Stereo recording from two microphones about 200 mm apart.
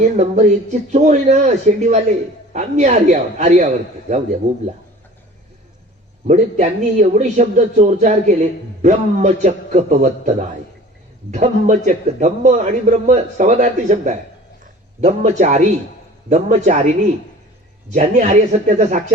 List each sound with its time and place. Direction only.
0.2 s a man's voice: 35° right (ahead or behind)
6.2 s a man's voice: 35° right (ahead or behind)